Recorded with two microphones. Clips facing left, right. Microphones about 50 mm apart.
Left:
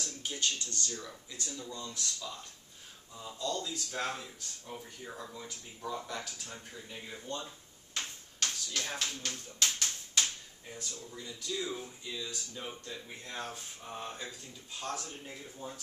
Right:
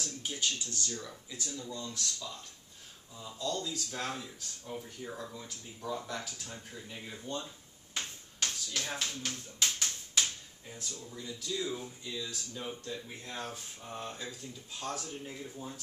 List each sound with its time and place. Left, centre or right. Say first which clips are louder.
0.0 s speech: even; centre
1.3 s speech: right 2 dB; centre
7.9 s a sound: even; centre
9.6 s tap: left 1 dB; centre
10.7 s speech: even; centre